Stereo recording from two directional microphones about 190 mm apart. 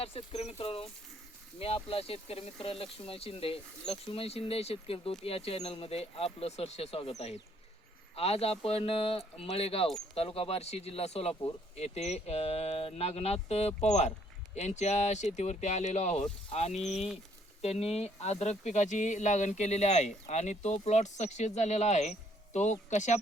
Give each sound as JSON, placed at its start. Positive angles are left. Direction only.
{"t": 0.0, "sound": "speech", "side_deg": 30}
{"t": 8.1, "sound": "speech", "side_deg": 30}